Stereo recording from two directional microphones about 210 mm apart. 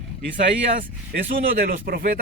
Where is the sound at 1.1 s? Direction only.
45° right (ahead or behind).